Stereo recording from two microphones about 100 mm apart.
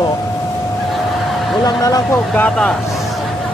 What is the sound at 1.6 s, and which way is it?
Speech, 35° left (ahead or behind).